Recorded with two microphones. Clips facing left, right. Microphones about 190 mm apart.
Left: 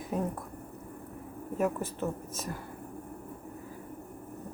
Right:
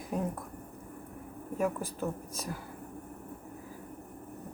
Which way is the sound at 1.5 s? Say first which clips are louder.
Left 1 dB; centre (ahead or behind).